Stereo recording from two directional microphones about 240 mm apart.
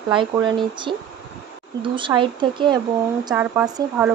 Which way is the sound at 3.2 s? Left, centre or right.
Centre.